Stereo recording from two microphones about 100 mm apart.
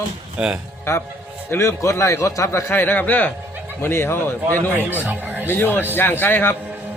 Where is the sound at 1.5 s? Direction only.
25° left (ahead or behind).